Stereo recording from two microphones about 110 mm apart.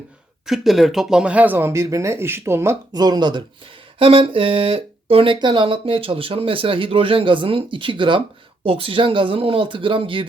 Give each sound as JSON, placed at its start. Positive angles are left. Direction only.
{"t": 0.4, "sound": "speech", "side_deg": 0}
{"t": 2.9, "sound": "speech", "side_deg": -40}
{"t": 3.9, "sound": "speech", "side_deg": -55}